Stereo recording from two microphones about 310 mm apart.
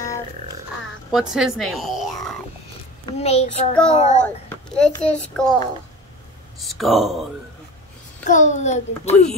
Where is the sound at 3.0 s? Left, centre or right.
Left.